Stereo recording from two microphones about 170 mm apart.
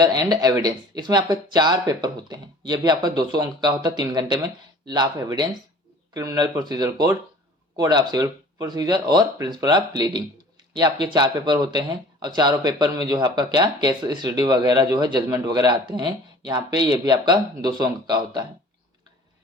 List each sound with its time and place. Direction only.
0.0 s speech: 25° right (ahead or behind)